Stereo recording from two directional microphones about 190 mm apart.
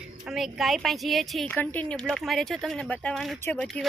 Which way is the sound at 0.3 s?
Centre (ahead or behind).